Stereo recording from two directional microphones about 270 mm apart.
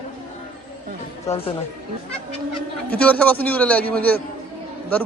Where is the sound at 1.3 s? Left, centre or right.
Left.